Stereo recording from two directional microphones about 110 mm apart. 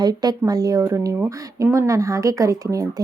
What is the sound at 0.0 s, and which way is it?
A woman's voice, 35° right (ahead or behind).